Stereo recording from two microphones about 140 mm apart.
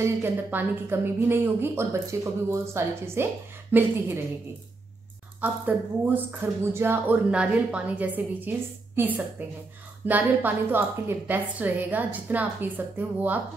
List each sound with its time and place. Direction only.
0.0 s speech: 15° right (ahead or behind)
5.4 s speech: 15° right (ahead or behind)